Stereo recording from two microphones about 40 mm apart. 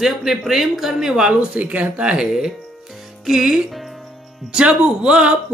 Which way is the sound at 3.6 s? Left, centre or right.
Centre.